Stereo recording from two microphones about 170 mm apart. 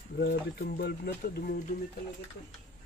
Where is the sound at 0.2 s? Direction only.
65° left (ahead or behind).